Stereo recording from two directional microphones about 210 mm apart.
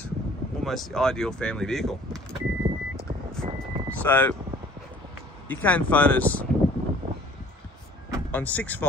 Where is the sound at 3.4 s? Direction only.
30° right (ahead or behind).